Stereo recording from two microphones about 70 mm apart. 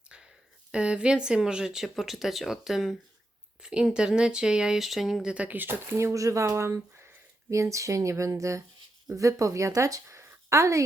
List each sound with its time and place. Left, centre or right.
0.7 s speech: centre
5.3 s speech: right
6.0 s speech: right